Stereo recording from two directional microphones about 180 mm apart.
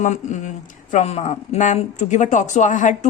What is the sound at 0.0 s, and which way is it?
Speech, 40° left (ahead or behind).